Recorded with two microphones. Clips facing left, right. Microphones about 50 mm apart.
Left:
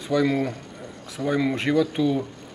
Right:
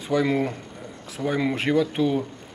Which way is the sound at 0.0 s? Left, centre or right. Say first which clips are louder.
Left 1 dB; centre.